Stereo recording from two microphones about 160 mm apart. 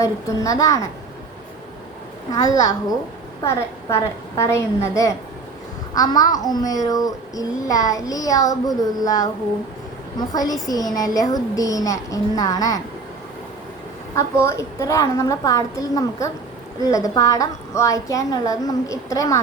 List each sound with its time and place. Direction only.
0.0 s a woman's voice: 20° left (ahead or behind)
2.3 s a woman's voice: 20° left (ahead or behind)
14.2 s a woman's voice: 15° left (ahead or behind)